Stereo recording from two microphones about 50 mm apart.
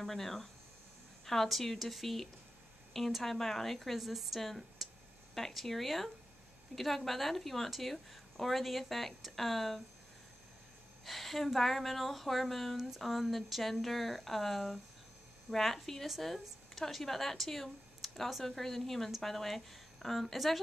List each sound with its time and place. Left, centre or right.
0.0 s a woman's voice: centre
11.1 s a woman's voice: centre